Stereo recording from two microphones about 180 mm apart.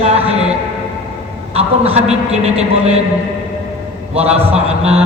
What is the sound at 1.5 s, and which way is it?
A man's voice, 35° right (ahead or behind).